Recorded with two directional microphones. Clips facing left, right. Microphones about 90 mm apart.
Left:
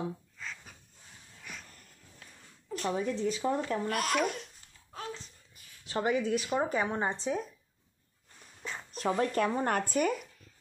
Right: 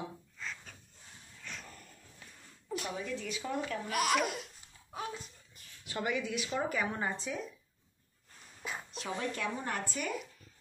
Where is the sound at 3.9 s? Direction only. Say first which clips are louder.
Right 2 dB; 5° right (ahead or behind).